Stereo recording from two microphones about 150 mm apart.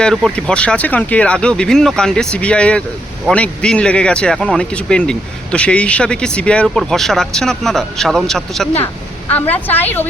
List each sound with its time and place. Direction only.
0.0 s speech: centre (ahead or behind)